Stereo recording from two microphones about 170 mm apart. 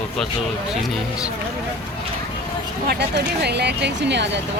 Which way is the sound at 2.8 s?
70° right (ahead or behind).